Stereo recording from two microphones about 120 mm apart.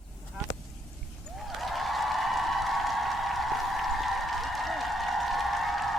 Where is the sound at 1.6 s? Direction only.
Centre (ahead or behind).